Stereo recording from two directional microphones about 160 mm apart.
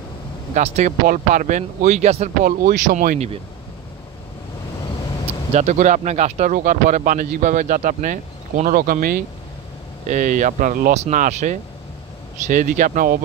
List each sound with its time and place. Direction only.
0.6 s speech: 45° right (ahead or behind)
1.0 s speech: 55° right (ahead or behind)
2.4 s speech: 60° right (ahead or behind)
5.5 s speech: 45° right (ahead or behind); by 9.2 s 65° right (ahead or behind)
10.0 s speech: 55° right (ahead or behind)